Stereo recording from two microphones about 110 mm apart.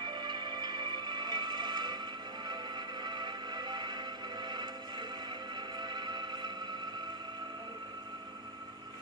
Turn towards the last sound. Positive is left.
turn(degrees=-40)  # may be behind; listen again after turning